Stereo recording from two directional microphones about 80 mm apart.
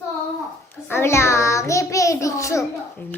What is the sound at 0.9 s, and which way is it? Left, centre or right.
Child singing, left.